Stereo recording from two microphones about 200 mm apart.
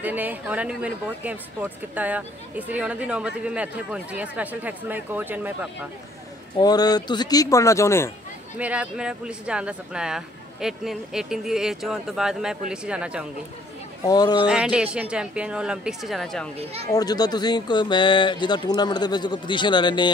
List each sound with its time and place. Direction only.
0.0 s speech: 10° right (ahead or behind)
6.6 s speech: 20° left (ahead or behind)
8.5 s speech: 5° right (ahead or behind)
14.0 s speech: 20° left (ahead or behind)
14.4 s speech: 5° right (ahead or behind)
16.5 s speech: 30° right (ahead or behind)
16.9 s speech: 20° left (ahead or behind)